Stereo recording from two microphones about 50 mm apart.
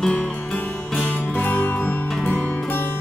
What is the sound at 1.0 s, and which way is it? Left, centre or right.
Music, left.